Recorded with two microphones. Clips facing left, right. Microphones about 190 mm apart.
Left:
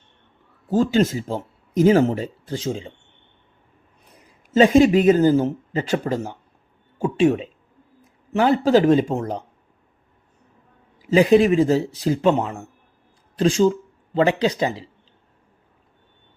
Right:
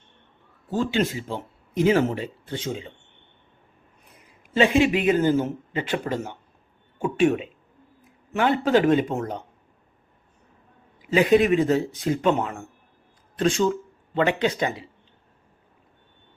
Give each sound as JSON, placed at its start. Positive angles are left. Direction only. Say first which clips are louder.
{"t": 0.7, "sound": "speech", "louder": "left 6 dB", "side_deg": 40}
{"t": 4.5, "sound": "speech", "louder": "left 6 dB", "side_deg": 40}
{"t": 11.1, "sound": "speech", "louder": "left 3 dB", "side_deg": 35}